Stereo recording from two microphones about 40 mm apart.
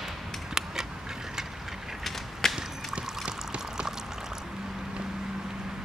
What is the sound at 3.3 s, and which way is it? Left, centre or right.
Pour, right.